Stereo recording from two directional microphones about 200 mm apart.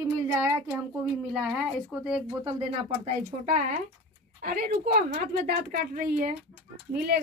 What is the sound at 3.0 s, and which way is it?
A woman's voice, 40° right (ahead or behind).